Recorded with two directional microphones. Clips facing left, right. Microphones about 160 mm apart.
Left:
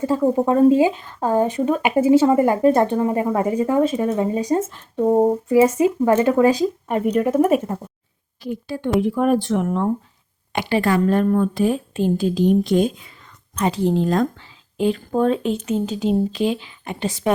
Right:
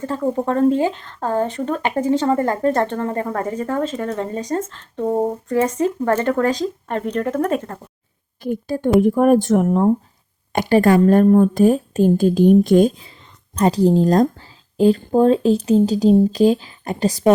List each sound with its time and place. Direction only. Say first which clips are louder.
0.0 s speech: left 3 dB; 10° left (ahead or behind)
8.4 s a woman's voice: right 4 dB; 45° right (ahead or behind)